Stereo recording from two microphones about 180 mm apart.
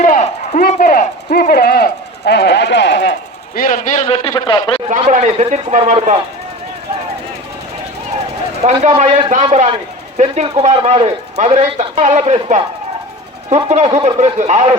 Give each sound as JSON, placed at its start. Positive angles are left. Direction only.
{"t": 0.0, "sound": "a sound", "side_deg": 45}
{"t": 4.0, "sound": "a man's voice", "side_deg": 30}
{"t": 4.9, "sound": "speech", "side_deg": -40}
{"t": 8.6, "sound": "speech", "side_deg": -35}
{"t": 13.7, "sound": "speech", "side_deg": -40}